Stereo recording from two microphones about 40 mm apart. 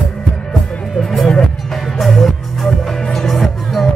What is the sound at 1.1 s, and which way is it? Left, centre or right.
Music, centre.